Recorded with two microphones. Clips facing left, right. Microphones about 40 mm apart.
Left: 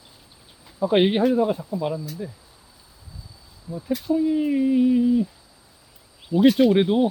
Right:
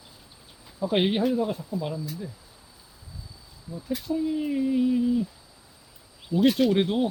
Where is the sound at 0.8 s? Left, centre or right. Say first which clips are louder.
Left 5 dB; centre.